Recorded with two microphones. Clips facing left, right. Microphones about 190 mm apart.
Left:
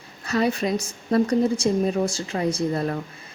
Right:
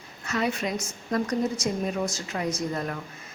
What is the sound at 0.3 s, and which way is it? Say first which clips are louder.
A woman's voice: left 5 dB; 35° left (ahead or behind).